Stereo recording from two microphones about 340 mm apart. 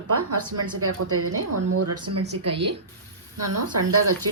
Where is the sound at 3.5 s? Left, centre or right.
Right.